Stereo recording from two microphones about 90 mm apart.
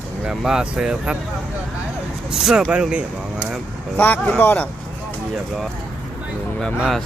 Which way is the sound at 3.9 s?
20° left (ahead or behind).